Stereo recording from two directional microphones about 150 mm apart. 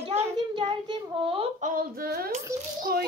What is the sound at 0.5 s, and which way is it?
Speech, 30° right (ahead or behind).